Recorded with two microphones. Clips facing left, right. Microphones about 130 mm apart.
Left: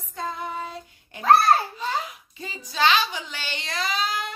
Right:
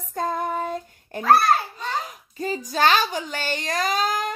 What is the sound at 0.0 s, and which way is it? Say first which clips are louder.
Child singing: right 6 dB; 45° right (ahead or behind).